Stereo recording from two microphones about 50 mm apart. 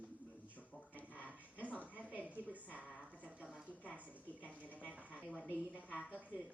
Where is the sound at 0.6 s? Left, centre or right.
Left.